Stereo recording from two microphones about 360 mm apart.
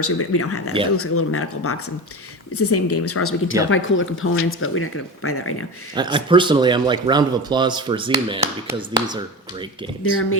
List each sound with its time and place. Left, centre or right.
0.0 s speech: left
5.9 s a man's voice: centre
10.0 s speech: left